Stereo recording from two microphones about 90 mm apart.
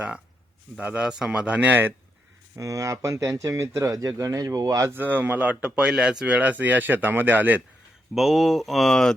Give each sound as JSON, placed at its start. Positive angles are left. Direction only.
{"t": 0.8, "sound": "speech", "side_deg": -15}
{"t": 2.6, "sound": "speech", "side_deg": -40}
{"t": 4.9, "sound": "speech", "side_deg": -20}
{"t": 8.1, "sound": "speech", "side_deg": 0}